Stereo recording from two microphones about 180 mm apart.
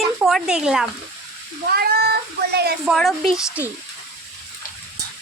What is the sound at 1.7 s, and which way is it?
Speech, 60° right (ahead or behind).